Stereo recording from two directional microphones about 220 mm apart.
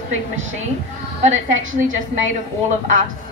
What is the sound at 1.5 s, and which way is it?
Speech, 65° right (ahead or behind).